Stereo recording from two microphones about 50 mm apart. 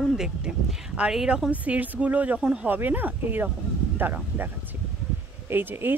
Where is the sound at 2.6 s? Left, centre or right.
Right.